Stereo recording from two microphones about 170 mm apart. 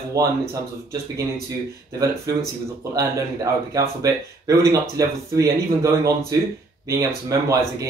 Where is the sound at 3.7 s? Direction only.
20° right (ahead or behind).